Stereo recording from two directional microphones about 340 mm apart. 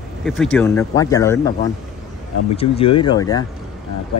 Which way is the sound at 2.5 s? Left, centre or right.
Centre.